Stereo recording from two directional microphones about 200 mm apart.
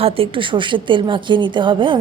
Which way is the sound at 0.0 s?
30° right (ahead or behind).